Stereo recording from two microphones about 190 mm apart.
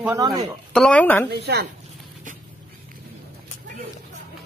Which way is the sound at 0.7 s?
5° left (ahead or behind).